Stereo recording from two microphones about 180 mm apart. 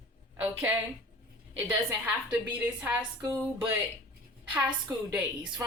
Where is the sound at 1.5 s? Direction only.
10° right (ahead or behind).